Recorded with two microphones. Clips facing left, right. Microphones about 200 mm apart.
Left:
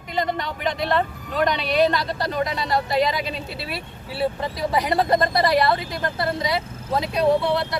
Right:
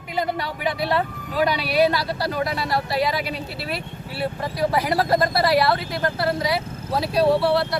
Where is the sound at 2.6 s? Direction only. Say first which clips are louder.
Left 4 dB; 20° left (ahead or behind).